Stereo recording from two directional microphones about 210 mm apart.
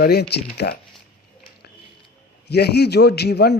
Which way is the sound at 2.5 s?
50° left (ahead or behind).